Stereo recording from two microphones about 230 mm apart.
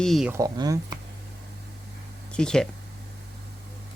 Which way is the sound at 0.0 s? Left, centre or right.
Centre.